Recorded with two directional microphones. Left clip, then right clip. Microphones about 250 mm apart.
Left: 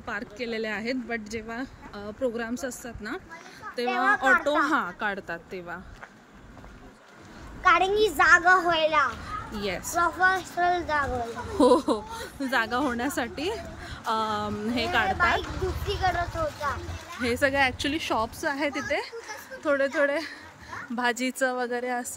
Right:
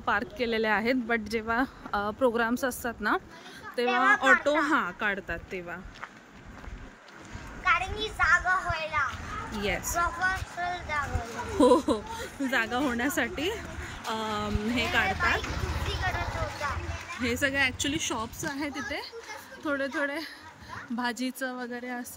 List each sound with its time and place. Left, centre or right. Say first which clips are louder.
0.0 s a woman's voice: right 5 dB; centre
7.6 s a woman's voice: left 7 dB; left
9.6 s a woman's voice: right 2 dB; centre
9.9 s a woman's voice: left 7 dB; left
11.5 s a woman's voice: left 1 dB; centre
15.9 s a woman's voice: left 6 dB; left
17.2 s a woman's voice: left 3 dB; centre